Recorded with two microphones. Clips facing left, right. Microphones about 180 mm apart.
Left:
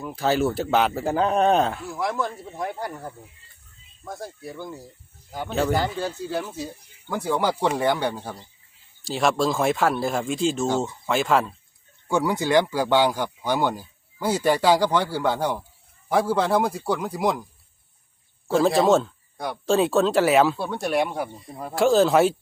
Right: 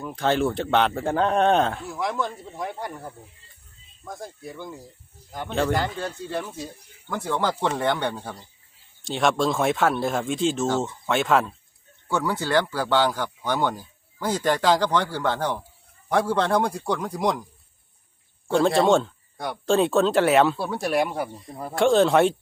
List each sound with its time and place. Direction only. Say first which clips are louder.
0.0 s speech: even; 5° left (ahead or behind)
12.0 s speech: left 3 dB; 15° left (ahead or behind)
18.4 s speech: even; centre (ahead or behind)